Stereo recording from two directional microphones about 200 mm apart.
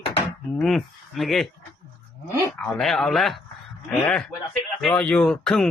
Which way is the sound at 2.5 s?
5° left (ahead or behind).